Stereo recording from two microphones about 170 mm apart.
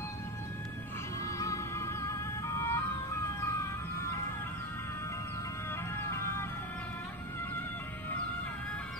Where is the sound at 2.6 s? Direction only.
15° left (ahead or behind).